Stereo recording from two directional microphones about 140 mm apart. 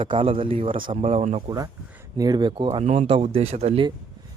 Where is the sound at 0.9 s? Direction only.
50° right (ahead or behind); by 2.8 s 35° right (ahead or behind).